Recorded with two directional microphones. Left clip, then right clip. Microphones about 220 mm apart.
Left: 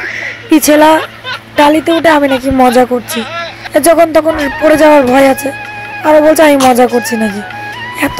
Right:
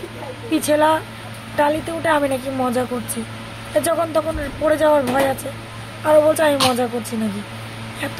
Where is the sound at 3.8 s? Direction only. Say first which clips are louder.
Left 12 dB; 35° left (ahead or behind).